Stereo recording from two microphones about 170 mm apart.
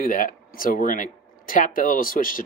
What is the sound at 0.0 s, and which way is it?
Speech, 55° left (ahead or behind).